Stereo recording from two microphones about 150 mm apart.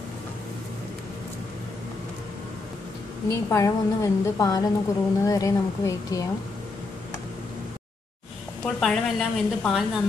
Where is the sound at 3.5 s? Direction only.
20° left (ahead or behind).